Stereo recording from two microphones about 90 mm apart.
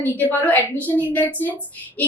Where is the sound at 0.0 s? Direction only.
20° left (ahead or behind).